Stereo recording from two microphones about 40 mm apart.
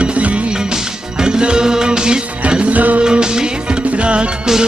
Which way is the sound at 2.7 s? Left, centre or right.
Right.